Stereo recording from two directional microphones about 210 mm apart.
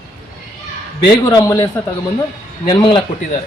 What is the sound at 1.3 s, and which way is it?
Speech, 15° left (ahead or behind).